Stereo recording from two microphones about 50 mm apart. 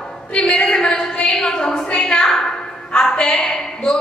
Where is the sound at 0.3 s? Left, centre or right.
Left.